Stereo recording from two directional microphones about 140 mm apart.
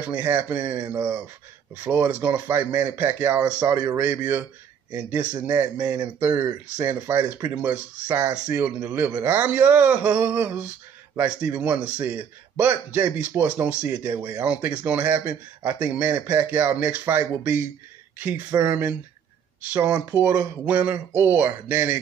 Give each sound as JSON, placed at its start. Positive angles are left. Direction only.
{"t": 0.1, "sound": "speech", "side_deg": -15}
{"t": 14.1, "sound": "speech", "side_deg": -25}
{"t": 14.4, "sound": "speech", "side_deg": -10}